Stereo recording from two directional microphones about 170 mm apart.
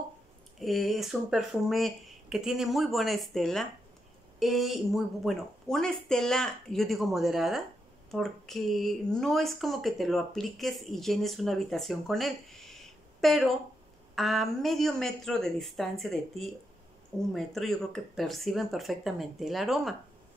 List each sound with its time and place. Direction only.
0.6 s speech: centre (ahead or behind)